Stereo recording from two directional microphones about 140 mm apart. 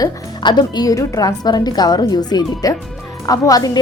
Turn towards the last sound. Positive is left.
turn(degrees=25)  # may be behind; listen again after turning